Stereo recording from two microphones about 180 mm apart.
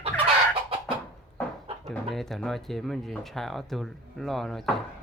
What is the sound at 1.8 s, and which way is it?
Speech, centre (ahead or behind).